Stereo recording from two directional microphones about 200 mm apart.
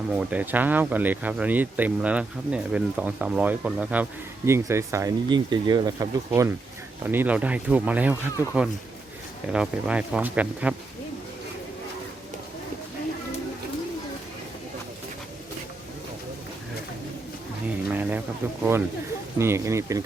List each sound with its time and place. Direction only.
0.1 s speech: 5° right (ahead or behind)
17.8 s a sound: 5° right (ahead or behind)
19.4 s speech: 15° right (ahead or behind)